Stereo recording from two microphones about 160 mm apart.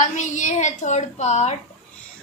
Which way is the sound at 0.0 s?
50° left (ahead or behind).